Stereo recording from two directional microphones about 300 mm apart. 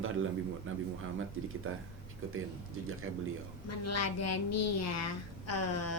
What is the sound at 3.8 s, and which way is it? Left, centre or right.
A woman's voice, left.